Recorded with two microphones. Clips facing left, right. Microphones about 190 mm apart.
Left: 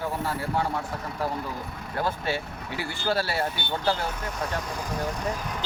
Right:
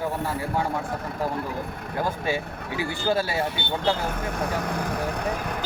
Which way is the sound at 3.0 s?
15° right (ahead or behind).